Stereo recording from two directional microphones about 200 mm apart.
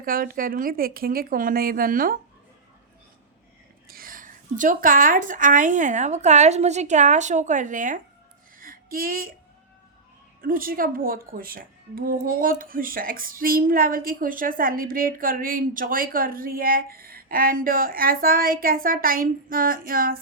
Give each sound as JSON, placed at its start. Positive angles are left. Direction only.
{"t": 0.0, "sound": "a woman's voice", "side_deg": -45}
{"t": 3.8, "sound": "a woman's voice", "side_deg": -45}
{"t": 8.5, "sound": "a sound", "side_deg": -45}
{"t": 10.4, "sound": "a woman's voice", "side_deg": -45}